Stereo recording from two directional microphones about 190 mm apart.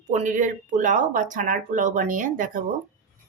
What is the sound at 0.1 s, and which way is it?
Speech, 40° right (ahead or behind).